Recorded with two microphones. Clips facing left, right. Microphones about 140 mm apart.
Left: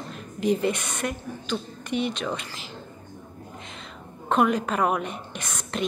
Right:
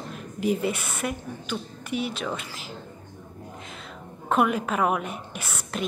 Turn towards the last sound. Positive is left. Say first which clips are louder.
# left 1 dB
turn(degrees=-10)  # may be behind; listen again after turning